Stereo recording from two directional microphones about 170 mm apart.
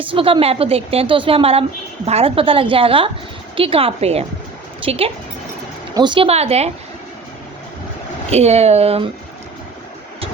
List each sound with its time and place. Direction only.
0.0 s a woman's voice: 30° right (ahead or behind)
8.3 s a woman's voice: 40° right (ahead or behind)